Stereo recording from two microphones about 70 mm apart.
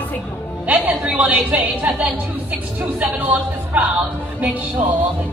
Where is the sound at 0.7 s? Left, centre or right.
Right.